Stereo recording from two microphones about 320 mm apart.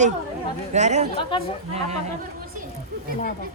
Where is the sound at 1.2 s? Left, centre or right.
Centre.